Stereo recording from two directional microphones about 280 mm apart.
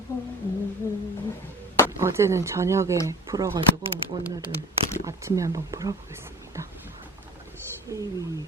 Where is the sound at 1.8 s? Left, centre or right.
Centre.